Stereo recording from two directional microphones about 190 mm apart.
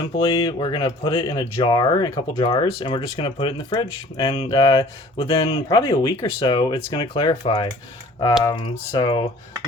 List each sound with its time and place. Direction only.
0.3 s speech: 25° left (ahead or behind)
5.8 s speech: 20° left (ahead or behind)
8.7 s speech: 20° left (ahead or behind)